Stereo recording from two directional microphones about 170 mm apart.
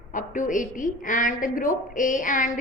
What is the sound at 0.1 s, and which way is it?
A woman's voice, 50° left (ahead or behind).